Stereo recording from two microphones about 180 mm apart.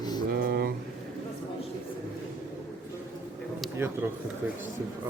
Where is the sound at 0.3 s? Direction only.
55° right (ahead or behind).